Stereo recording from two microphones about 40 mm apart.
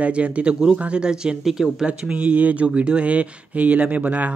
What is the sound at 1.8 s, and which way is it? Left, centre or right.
Speech, right.